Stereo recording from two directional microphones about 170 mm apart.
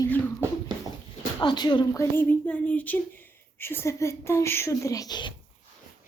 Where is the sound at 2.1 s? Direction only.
10° left (ahead or behind).